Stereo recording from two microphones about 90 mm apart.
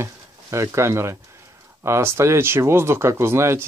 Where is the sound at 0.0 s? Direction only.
30° right (ahead or behind).